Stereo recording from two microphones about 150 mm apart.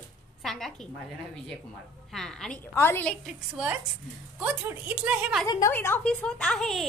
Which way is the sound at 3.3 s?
5° right (ahead or behind).